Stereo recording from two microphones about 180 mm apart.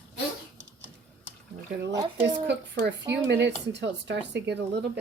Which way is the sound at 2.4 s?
75° right (ahead or behind).